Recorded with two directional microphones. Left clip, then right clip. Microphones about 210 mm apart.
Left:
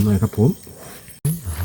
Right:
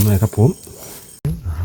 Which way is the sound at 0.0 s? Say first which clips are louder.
Right 2 dB; 50° right (ahead or behind).